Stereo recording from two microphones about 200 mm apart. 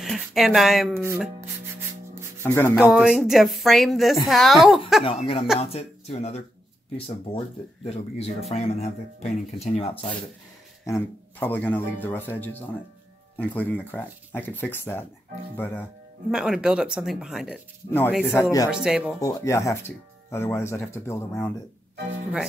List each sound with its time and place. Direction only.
0.0 s a woman's voice: centre (ahead or behind)
0.9 s speech: 10° right (ahead or behind)
2.4 s speech: 10° left (ahead or behind)
2.7 s a woman's voice: 5° right (ahead or behind)
5.0 s speech: 30° left (ahead or behind)
10.9 s speech: 10° left (ahead or behind)
16.3 s a woman's voice: centre (ahead or behind)
18.2 s speech: 10° left (ahead or behind)
18.7 s a woman's voice: 5° right (ahead or behind)
19.2 s speech: 15° left (ahead or behind)